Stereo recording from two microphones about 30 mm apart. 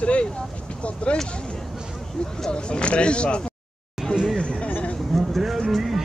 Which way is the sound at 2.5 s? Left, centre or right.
Left.